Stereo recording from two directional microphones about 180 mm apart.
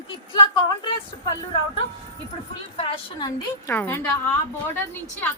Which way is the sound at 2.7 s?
25° left (ahead or behind).